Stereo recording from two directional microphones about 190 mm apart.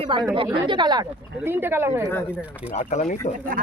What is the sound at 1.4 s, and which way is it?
Speech, 10° right (ahead or behind).